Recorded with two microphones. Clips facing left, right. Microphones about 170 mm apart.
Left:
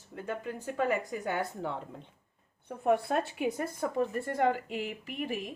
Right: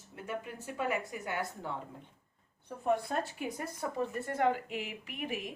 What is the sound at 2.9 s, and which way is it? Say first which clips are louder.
Speech: left 4 dB; 60° left (ahead or behind).